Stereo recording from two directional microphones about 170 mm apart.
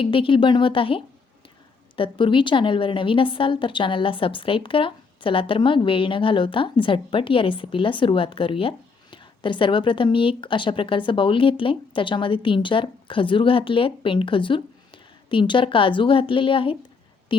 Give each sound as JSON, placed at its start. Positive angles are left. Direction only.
{"t": 0.0, "sound": "a woman's voice", "side_deg": 30}